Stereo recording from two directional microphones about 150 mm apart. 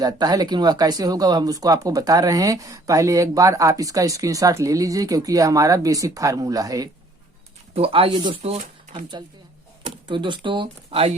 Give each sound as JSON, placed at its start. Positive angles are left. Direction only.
{"t": 0.0, "sound": "speech", "side_deg": -25}
{"t": 7.7, "sound": "speech", "side_deg": -40}
{"t": 8.4, "sound": "speech", "side_deg": -45}
{"t": 10.1, "sound": "speech", "side_deg": -30}